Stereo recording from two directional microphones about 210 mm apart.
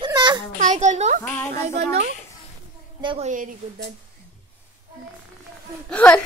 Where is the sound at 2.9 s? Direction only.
25° right (ahead or behind).